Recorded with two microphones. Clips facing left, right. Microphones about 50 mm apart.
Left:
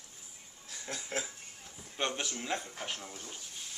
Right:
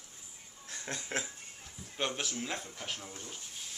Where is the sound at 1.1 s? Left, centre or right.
Right.